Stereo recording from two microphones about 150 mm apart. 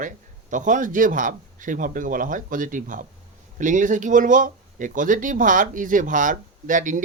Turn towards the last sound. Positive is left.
turn(degrees=-60)  # may be behind; listen again after turning